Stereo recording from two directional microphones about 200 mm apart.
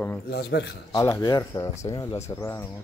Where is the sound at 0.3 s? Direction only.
55° left (ahead or behind).